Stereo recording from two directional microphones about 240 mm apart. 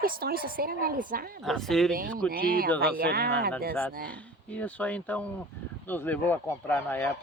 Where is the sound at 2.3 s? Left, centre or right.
Right.